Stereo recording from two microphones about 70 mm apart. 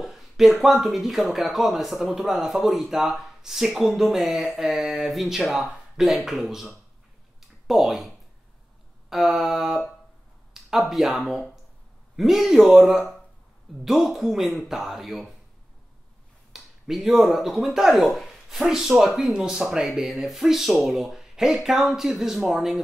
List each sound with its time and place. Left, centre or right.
0.0 s speech: centre
9.1 s speech: centre
16.5 s speech: centre